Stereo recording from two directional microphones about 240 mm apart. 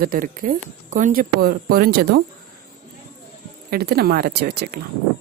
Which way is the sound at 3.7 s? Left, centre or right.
Right.